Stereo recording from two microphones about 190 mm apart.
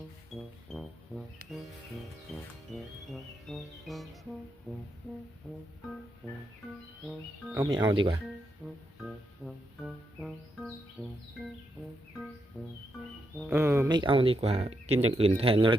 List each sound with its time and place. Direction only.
0.3 s music: centre (ahead or behind)
2.7 s music: centre (ahead or behind)
7.0 s music: centre (ahead or behind)
7.6 s speech: 20° right (ahead or behind)
8.6 s music: centre (ahead or behind)
12.6 s music: centre (ahead or behind)
13.6 s a sound: 10° right (ahead or behind)
13.9 s speech: 25° right (ahead or behind)